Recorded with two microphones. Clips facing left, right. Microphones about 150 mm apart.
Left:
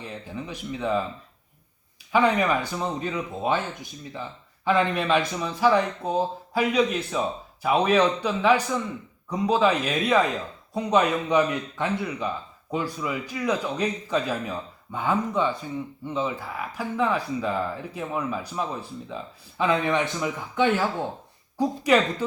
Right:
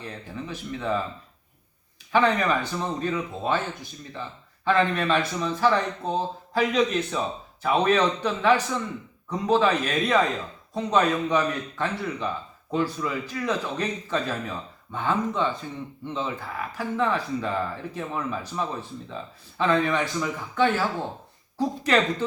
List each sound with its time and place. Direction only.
0.0 s speech: 15° left (ahead or behind)
2.1 s speech: 10° left (ahead or behind)
4.6 s speech: 10° left (ahead or behind)